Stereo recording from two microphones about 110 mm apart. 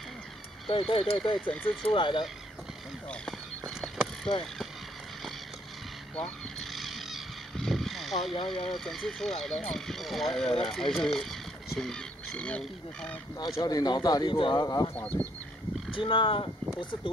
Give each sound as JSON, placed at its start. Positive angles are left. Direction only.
{"t": 0.7, "sound": "speech", "side_deg": 55}
{"t": 1.4, "sound": "speech", "side_deg": 15}
{"t": 1.8, "sound": "speech", "side_deg": 50}
{"t": 3.1, "sound": "a sound", "side_deg": 5}
{"t": 6.7, "sound": "vehicle", "side_deg": 0}
{"t": 8.5, "sound": "speech", "side_deg": 5}
{"t": 13.6, "sound": "speech", "side_deg": 35}
{"t": 15.0, "sound": "speech", "side_deg": 15}
{"t": 15.9, "sound": "speech", "side_deg": 50}